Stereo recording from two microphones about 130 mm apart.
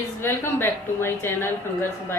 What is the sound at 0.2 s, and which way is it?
A woman's voice, 20° left (ahead or behind).